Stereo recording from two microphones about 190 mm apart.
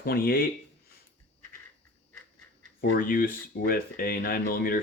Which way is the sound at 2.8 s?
50° left (ahead or behind).